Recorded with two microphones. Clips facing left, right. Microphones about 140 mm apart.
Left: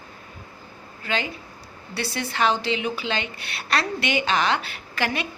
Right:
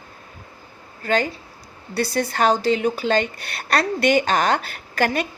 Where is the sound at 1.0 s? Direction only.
45° right (ahead or behind).